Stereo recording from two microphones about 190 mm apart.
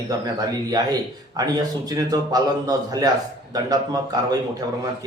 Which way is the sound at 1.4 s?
20° right (ahead or behind).